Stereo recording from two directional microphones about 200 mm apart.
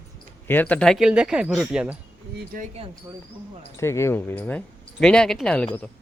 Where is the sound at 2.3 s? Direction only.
45° right (ahead or behind).